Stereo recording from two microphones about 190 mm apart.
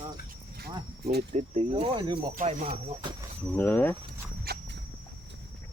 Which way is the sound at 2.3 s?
40° right (ahead or behind).